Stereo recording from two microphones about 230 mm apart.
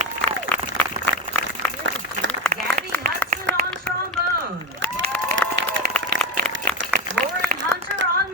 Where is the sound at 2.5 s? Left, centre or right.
Right.